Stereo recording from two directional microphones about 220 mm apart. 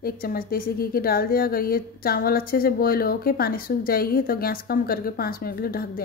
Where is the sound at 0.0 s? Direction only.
40° left (ahead or behind).